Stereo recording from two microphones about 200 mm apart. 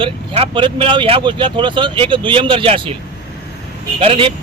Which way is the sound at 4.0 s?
25° right (ahead or behind).